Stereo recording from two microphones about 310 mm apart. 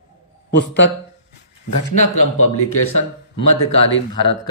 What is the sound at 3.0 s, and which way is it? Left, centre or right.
Speech, centre.